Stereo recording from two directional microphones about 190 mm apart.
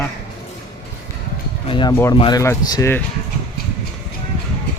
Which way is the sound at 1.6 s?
25° left (ahead or behind).